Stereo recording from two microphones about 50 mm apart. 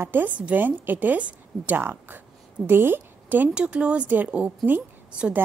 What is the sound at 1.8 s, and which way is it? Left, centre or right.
A woman's voice, right.